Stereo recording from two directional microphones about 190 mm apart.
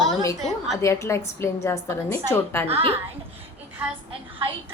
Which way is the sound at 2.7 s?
30° right (ahead or behind).